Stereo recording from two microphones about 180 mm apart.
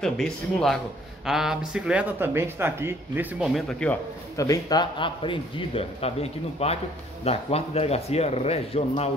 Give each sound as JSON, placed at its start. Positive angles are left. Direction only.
{"t": 0.0, "sound": "speech", "side_deg": 5}
{"t": 4.4, "sound": "a man's voice", "side_deg": 20}